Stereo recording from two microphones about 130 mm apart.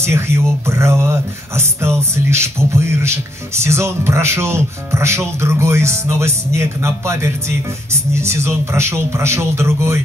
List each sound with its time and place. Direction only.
0.7 s music: 20° right (ahead or behind)